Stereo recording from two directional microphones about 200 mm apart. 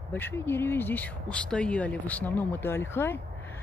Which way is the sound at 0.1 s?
10° left (ahead or behind).